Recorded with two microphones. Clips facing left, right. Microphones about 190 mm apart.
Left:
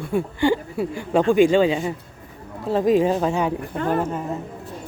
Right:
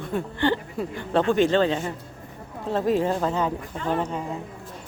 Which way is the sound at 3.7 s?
55° left (ahead or behind).